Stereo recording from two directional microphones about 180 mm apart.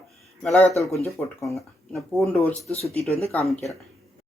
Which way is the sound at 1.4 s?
Centre (ahead or behind).